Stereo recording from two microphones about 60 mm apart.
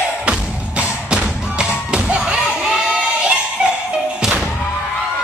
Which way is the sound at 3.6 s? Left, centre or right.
Centre.